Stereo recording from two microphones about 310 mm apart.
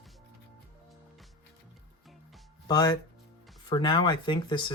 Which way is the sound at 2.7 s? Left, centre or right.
Centre.